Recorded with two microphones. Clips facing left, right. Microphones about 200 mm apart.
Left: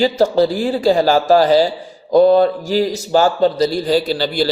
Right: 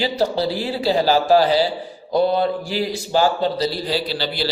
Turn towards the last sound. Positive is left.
turn(degrees=45)  # may be behind; listen again after turning